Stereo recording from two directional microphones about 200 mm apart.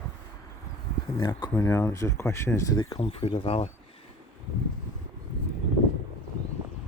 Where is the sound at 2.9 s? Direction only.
30° left (ahead or behind).